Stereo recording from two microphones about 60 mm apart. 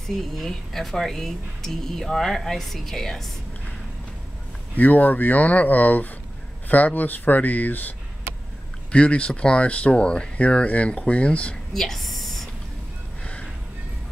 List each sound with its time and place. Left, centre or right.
0.0 s speech: centre
4.7 s speech: left
8.9 s speech: centre
11.7 s whispering: centre
13.2 s music: centre